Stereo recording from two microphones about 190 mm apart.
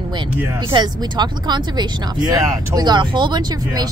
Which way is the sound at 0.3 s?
10° right (ahead or behind).